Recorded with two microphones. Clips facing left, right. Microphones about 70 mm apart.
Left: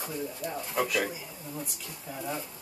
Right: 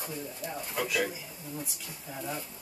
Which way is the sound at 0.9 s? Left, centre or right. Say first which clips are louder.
Left 1 dB; centre.